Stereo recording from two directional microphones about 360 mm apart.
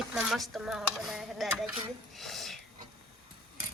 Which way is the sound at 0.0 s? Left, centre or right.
Centre.